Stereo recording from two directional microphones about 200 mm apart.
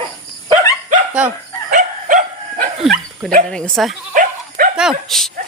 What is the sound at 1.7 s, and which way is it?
Dog, 40° right (ahead or behind).